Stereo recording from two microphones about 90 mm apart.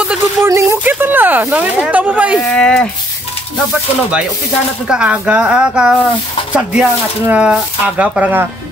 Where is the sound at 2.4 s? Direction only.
10° left (ahead or behind).